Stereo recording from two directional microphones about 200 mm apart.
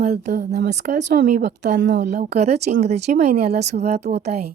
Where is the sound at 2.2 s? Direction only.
30° right (ahead or behind).